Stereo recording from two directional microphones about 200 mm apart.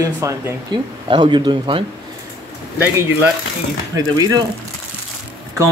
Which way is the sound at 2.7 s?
10° right (ahead or behind).